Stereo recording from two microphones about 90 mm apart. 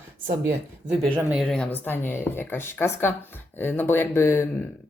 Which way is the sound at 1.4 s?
5° left (ahead or behind).